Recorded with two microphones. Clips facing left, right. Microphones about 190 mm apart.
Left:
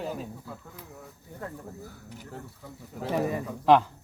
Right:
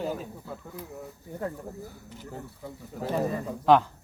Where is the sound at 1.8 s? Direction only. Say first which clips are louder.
Right 1 dB; 10° right (ahead or behind).